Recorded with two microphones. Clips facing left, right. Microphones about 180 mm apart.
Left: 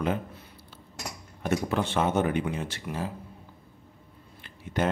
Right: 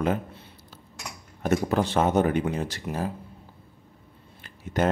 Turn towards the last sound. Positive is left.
turn(degrees=-45)  # may be behind; listen again after turning